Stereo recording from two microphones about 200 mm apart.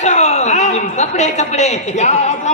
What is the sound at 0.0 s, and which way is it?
A man's voice, 35° left (ahead or behind).